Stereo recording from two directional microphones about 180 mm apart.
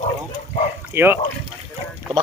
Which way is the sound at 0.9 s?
10° right (ahead or behind).